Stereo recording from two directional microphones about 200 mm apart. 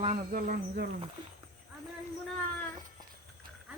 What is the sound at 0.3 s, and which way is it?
Speech, 40° right (ahead or behind).